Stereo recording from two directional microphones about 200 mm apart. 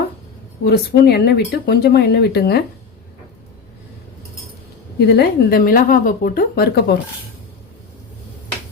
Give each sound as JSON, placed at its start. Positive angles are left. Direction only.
{"t": 0.6, "sound": "speech", "side_deg": 50}
{"t": 4.9, "sound": "speech", "side_deg": 55}